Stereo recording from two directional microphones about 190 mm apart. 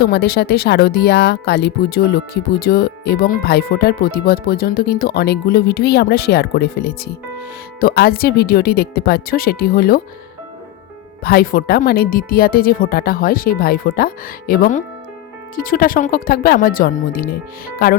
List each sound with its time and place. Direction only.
0.0 s speech: 55° left (ahead or behind)
11.2 s speech: 50° left (ahead or behind)